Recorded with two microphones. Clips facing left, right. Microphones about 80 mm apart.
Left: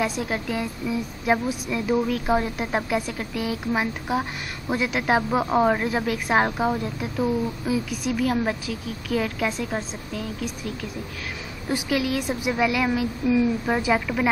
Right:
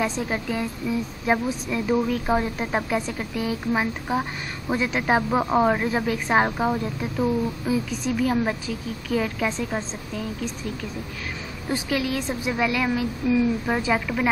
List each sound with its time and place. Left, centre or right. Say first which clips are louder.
0.3 s speech: even; centre
7.6 s a woman's voice: right 1 dB; centre
11.7 s a woman's voice: left 1 dB; centre